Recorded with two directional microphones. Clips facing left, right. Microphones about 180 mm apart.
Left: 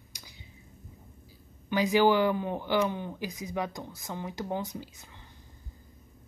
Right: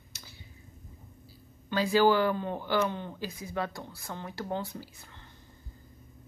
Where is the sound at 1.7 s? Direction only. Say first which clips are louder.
Left 1 dB; 15° left (ahead or behind).